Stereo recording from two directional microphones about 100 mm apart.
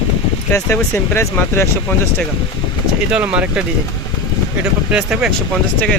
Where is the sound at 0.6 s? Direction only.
25° left (ahead or behind).